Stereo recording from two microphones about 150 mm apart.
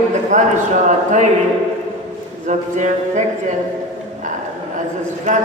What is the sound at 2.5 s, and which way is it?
Speech, 50° right (ahead or behind).